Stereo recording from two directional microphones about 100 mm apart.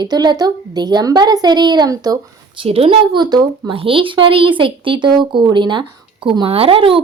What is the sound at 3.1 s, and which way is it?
Speech, 45° right (ahead or behind).